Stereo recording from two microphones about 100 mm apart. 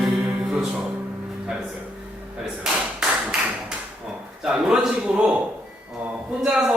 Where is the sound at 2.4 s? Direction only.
5° right (ahead or behind).